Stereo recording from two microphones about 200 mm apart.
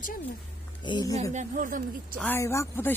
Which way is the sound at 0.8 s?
20° left (ahead or behind).